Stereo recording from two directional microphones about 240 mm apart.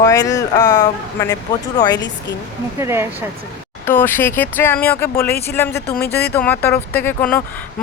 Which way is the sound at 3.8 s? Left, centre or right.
Centre.